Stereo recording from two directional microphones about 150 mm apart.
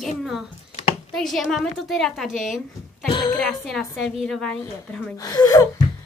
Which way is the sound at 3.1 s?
30° left (ahead or behind).